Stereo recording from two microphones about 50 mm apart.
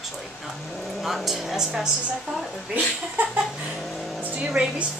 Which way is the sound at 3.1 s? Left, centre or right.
Right.